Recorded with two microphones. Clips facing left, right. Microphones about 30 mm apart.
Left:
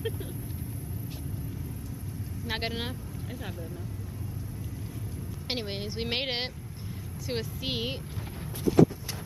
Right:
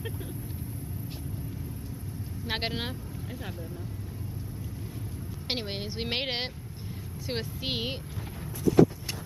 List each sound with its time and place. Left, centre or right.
2.4 s speech: centre
5.5 s a woman's voice: centre